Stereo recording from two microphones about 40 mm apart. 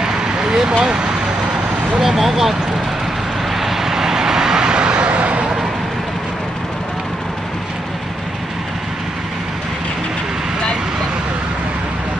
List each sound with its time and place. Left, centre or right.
0.0 s vehicle: centre
0.8 s speech: right
3.5 s vehicle: centre; by 5.4 s right